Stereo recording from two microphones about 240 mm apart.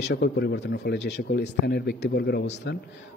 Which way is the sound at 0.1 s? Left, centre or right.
Left.